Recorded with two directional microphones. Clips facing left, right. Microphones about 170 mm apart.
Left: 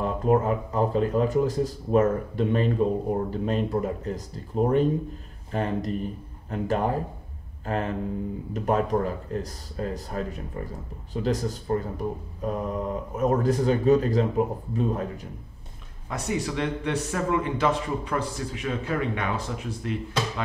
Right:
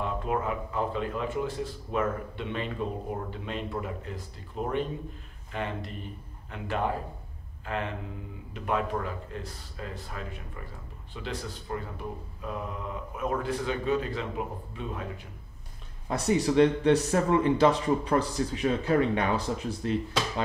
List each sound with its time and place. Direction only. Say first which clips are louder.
0.0 s speech: left 7 dB; 40° left (ahead or behind)
16.1 s a man's voice: right 3 dB; 35° right (ahead or behind)